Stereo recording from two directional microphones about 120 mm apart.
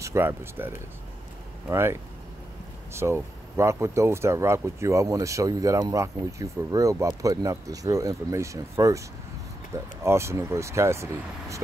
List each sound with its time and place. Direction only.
0.0 s speech: 25° right (ahead or behind)